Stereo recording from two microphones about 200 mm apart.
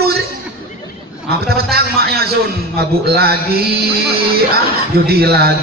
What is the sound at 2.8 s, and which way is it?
A man's voice, 50° right (ahead or behind).